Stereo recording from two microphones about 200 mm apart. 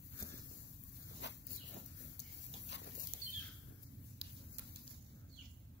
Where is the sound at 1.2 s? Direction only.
60° left (ahead or behind).